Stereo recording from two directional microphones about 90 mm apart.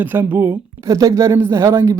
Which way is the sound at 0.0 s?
20° right (ahead or behind).